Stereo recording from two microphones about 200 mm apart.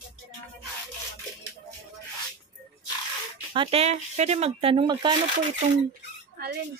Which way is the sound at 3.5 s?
25° right (ahead or behind).